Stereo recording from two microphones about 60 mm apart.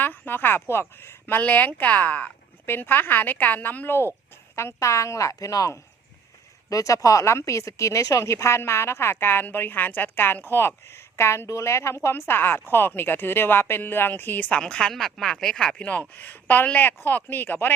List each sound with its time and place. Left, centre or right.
0.0 s speech: left
1.4 s speech: left
2.6 s a woman's voice: left
4.5 s a woman's voice: left
14.5 s speech: centre
15.9 s a woman's voice: left